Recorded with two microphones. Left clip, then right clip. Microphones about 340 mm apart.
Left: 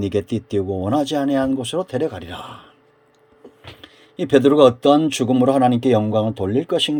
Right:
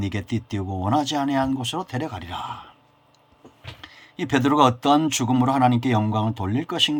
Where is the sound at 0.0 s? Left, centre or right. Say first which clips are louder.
Left 8 dB; right.